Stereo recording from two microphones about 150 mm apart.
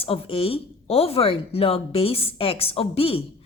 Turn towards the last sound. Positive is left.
turn(degrees=40)  # may be behind; listen again after turning